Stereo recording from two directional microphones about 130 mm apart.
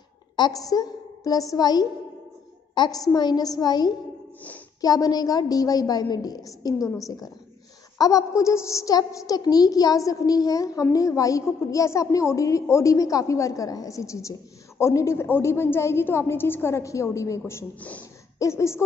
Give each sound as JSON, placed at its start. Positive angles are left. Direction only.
{"t": 0.4, "sound": "a woman's voice", "side_deg": 25}
{"t": 18.4, "sound": "a woman's voice", "side_deg": 20}